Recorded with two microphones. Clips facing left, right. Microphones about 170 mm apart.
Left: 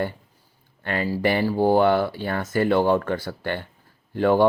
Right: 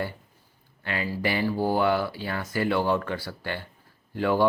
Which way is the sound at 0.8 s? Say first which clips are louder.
Left 5 dB; 50° left (ahead or behind).